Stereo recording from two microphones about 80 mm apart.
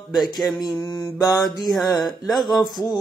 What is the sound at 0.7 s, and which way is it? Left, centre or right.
Mantra, left.